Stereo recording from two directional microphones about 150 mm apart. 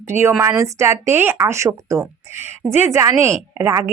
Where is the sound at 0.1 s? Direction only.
15° right (ahead or behind).